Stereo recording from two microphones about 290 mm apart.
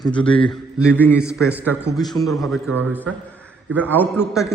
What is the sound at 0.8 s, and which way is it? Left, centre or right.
Speech, centre.